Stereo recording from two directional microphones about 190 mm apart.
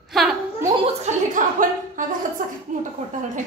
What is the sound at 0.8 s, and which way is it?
Chuckle, 35° right (ahead or behind).